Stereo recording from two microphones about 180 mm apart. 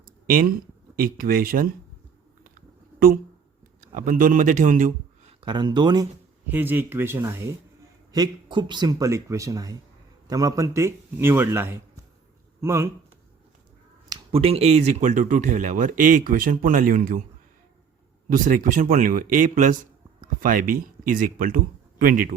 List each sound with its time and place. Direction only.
0.3 s speech: 50° right (ahead or behind)
2.4 s a sound: 55° right (ahead or behind)
3.8 s a man's voice: 50° right (ahead or behind)
5.4 s speech: 25° right (ahead or behind)
6.5 s speech: 10° right (ahead or behind)
14.1 s speech: 30° right (ahead or behind); by 17.2 s 50° right (ahead or behind)
18.3 s speech: 50° right (ahead or behind)